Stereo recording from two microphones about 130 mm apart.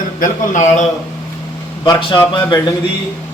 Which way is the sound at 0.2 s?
70° left (ahead or behind).